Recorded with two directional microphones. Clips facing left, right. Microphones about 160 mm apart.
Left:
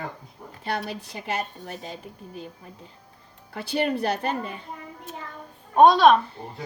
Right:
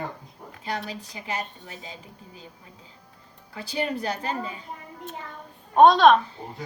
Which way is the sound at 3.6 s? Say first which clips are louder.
Left 4 dB; 65° left (ahead or behind).